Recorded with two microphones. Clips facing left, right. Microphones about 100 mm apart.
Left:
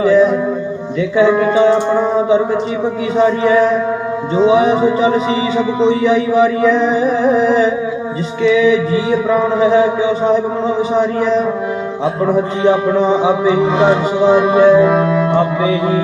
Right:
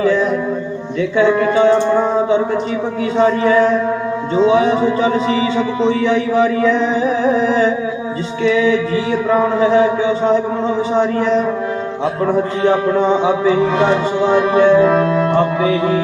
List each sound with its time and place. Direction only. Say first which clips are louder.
1.2 s speech: left 2 dB; 20° left (ahead or behind)
3.2 s a man's voice: left 1 dB; 15° left (ahead or behind)
9.6 s a man's voice: left 1 dB; 10° left (ahead or behind)
12.2 s a man's voice: left 2 dB; 15° left (ahead or behind)